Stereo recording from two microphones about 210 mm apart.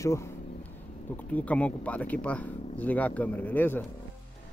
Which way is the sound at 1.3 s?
5° left (ahead or behind).